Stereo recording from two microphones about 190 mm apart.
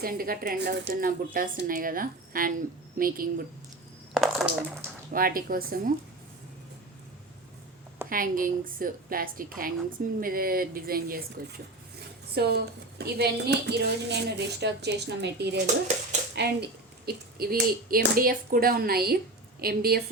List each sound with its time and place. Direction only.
0.0 s speech: 50° right (ahead or behind)
4.1 s a sound: centre (ahead or behind)
5.1 s speech: 50° right (ahead or behind)
8.1 s speech: 45° right (ahead or behind)
12.3 s a woman's voice: 55° right (ahead or behind)